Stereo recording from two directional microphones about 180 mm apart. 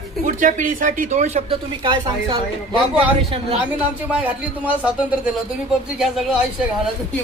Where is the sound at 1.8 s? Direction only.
25° right (ahead or behind).